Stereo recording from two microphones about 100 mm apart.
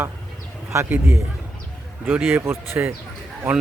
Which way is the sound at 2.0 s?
20° right (ahead or behind).